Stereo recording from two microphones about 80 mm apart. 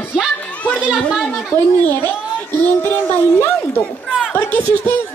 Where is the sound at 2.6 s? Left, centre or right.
Left.